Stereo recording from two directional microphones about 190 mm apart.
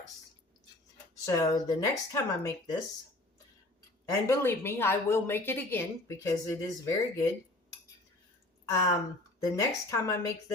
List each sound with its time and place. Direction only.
1.2 s speech: 15° left (ahead or behind)
4.1 s speech: 15° left (ahead or behind)
8.6 s speech: 15° left (ahead or behind)